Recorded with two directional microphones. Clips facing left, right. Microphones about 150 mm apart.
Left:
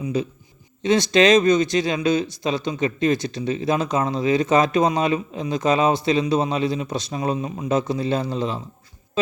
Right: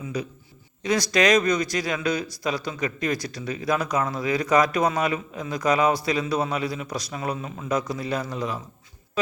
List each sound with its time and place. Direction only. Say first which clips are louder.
0.0 s a man's voice: left 6 dB; 25° left (ahead or behind)
9.2 s music: left 3 dB; 25° left (ahead or behind)